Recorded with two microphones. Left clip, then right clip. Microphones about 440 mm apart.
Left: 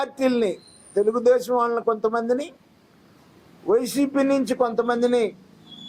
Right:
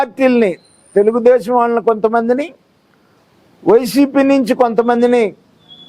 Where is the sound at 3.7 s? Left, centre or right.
Right.